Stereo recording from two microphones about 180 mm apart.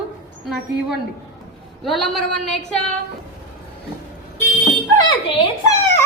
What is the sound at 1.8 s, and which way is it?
A woman's voice, centre (ahead or behind).